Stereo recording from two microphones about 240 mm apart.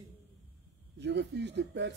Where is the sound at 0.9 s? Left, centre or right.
Right.